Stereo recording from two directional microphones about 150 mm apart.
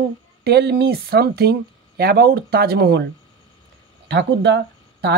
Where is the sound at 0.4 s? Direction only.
90° right.